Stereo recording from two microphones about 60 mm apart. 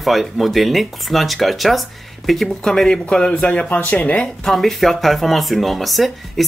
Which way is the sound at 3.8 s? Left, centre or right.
Left.